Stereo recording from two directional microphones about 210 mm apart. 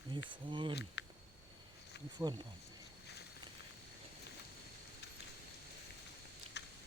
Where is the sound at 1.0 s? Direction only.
55° left (ahead or behind).